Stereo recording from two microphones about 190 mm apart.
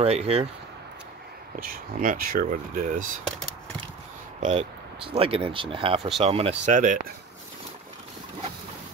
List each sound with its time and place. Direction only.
0.0 s speech: 35° right (ahead or behind)
1.6 s speech: 45° right (ahead or behind)
4.4 s speech: 35° right (ahead or behind)
5.9 s speech: centre (ahead or behind)
6.2 s speech: 30° right (ahead or behind)